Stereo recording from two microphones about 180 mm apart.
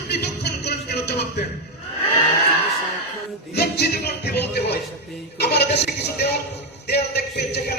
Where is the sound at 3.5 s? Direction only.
65° left (ahead or behind).